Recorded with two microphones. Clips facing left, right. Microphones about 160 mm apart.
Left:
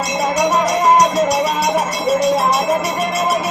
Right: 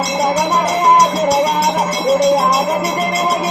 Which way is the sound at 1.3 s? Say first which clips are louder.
Right 3 dB; 30° right (ahead or behind).